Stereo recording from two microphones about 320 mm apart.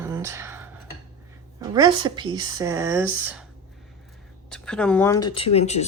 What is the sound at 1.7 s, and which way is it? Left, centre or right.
Speech, centre.